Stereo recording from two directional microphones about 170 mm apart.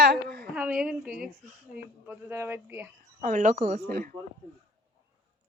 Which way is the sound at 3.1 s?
45° right (ahead or behind).